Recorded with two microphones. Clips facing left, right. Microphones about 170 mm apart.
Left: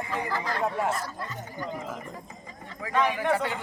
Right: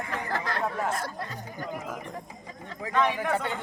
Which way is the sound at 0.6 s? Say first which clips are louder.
Left 4 dB; 5° left (ahead or behind).